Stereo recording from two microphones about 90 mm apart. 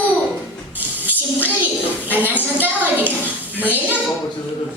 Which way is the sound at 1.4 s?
20° right (ahead or behind).